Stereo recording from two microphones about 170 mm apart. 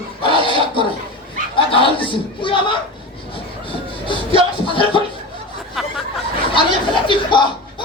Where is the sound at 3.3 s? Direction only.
30° left (ahead or behind).